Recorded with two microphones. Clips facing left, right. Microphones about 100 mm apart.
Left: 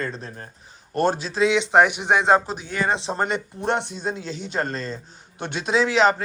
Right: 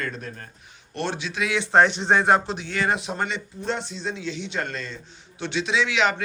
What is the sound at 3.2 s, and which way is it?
Speech, 55° left (ahead or behind).